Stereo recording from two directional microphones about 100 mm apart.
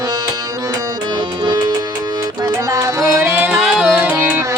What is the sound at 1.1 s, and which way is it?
Music, 50° right (ahead or behind).